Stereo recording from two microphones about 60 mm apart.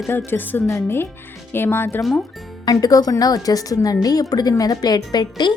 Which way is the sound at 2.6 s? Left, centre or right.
Left.